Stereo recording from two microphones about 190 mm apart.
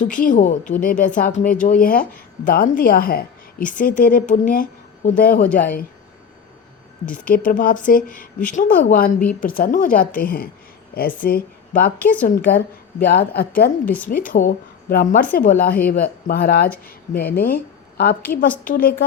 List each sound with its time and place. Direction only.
0.0 s a woman's voice: 45° left (ahead or behind)
7.3 s a woman's voice: 45° left (ahead or behind)
11.9 s a woman's voice: 10° left (ahead or behind)
13.1 s a woman's voice: 55° left (ahead or behind)
16.7 s speech: 10° left (ahead or behind)
17.3 s speech: 50° left (ahead or behind)
18.3 s a woman's voice: 50° left (ahead or behind)